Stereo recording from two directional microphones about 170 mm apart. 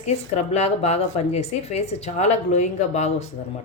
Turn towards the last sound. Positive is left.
turn(degrees=40)  # may be behind; listen again after turning